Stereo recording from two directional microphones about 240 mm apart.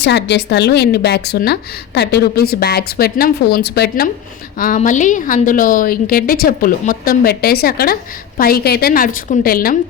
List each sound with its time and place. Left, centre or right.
0.0 s a woman's voice: left